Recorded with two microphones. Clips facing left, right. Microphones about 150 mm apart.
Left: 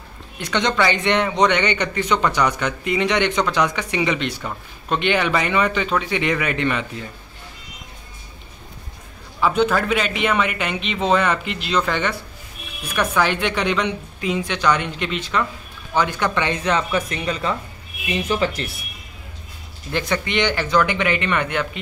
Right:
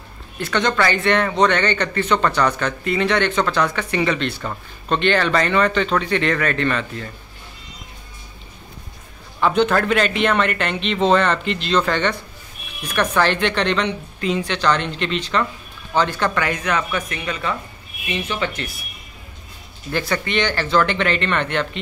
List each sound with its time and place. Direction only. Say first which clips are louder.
0.4 s speech: right 1 dB; 20° left (ahead or behind)
9.4 s speech: right 1 dB; 5° left (ahead or behind)
16.3 s a woman's voice: left 1 dB; 25° left (ahead or behind)
19.9 s speech: even; 20° left (ahead or behind)